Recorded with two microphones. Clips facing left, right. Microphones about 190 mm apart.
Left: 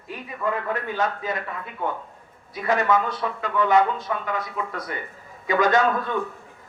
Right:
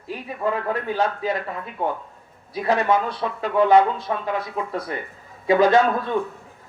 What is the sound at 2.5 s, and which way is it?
A man's voice, 35° right (ahead or behind).